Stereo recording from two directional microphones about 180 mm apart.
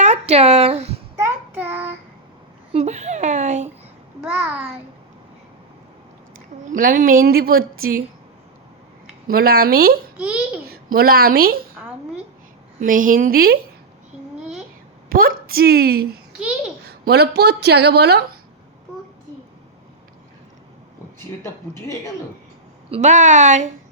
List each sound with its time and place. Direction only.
0.0 s speech: 40° right (ahead or behind)
1.2 s child singing: 10° right (ahead or behind)
2.7 s speech: 40° right (ahead or behind)
4.2 s a child's voice: 5° right (ahead or behind)
6.7 s a woman's voice: 50° right (ahead or behind)
9.2 s speech: 60° right (ahead or behind)
10.2 s a child's voice: 5° right (ahead or behind)
10.7 s a woman's voice: 55° right (ahead or behind)
12.8 s a woman's voice: 50° right (ahead or behind)
15.1 s speech: 55° right (ahead or behind)
16.4 s a child's voice: 5° right (ahead or behind)
16.8 s speech: 65° right (ahead or behind)
22.9 s speech: 40° right (ahead or behind)